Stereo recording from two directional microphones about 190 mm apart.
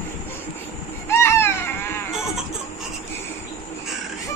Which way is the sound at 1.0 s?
15° left (ahead or behind).